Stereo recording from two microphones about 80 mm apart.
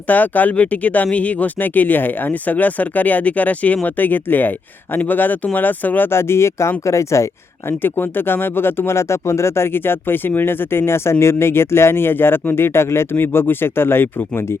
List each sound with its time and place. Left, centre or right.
0.1 s speech: left
7.7 s speech: left